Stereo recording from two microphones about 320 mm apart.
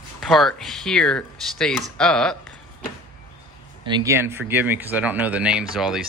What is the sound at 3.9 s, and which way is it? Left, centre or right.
Speech, centre.